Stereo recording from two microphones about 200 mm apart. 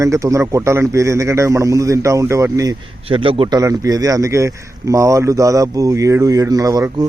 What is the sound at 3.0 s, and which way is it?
A man's voice, 25° right (ahead or behind).